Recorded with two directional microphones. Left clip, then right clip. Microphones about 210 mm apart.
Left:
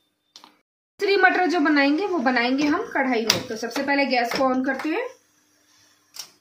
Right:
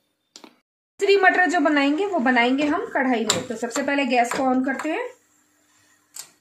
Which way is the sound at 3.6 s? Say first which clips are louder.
Left 1 dB; 50° right (ahead or behind).